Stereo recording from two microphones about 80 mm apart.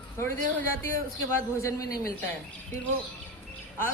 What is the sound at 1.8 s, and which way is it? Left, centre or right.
Speech, left.